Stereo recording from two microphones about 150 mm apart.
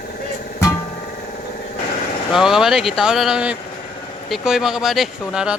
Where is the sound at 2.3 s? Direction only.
Centre (ahead or behind).